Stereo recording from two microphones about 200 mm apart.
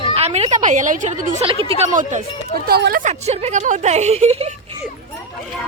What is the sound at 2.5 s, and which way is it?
Speech, 50° right (ahead or behind).